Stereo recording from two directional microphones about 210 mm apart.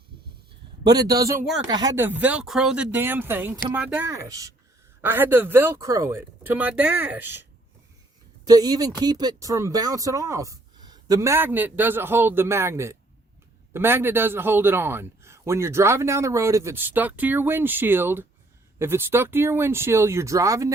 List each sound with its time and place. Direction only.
0.9 s speech: 15° right (ahead or behind)
8.4 s speech: 20° right (ahead or behind)